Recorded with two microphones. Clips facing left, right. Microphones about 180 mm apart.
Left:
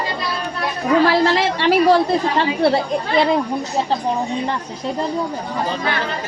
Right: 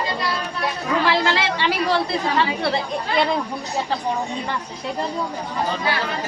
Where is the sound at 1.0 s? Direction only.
40° left (ahead or behind).